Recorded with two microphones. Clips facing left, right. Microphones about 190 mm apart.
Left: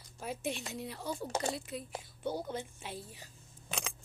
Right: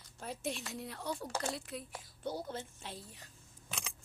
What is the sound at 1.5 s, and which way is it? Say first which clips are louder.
Speech: left 3 dB; centre (ahead or behind).